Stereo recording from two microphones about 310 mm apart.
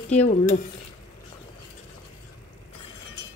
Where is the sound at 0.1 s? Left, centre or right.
Left.